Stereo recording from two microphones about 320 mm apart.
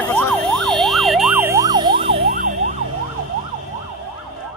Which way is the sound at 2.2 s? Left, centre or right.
Right.